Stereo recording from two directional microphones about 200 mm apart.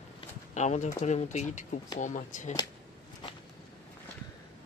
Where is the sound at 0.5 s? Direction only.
35° left (ahead or behind).